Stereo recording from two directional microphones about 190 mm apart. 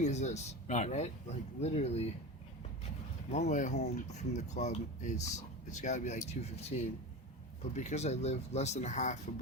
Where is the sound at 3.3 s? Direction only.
40° left (ahead or behind).